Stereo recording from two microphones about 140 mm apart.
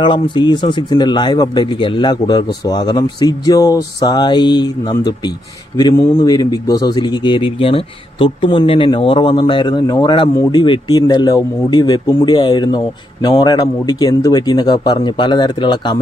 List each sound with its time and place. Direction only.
0.0 s speech: 35° left (ahead or behind)